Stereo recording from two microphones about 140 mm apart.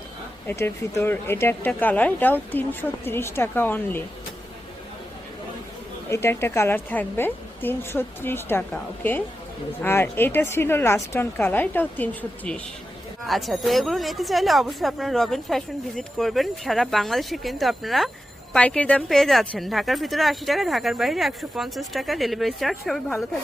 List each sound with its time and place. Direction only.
0.4 s speech: 20° left (ahead or behind)
6.1 s speech: 20° left (ahead or behind)
13.2 s a woman's voice: centre (ahead or behind)